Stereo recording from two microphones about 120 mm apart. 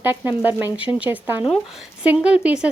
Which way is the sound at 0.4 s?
15° right (ahead or behind).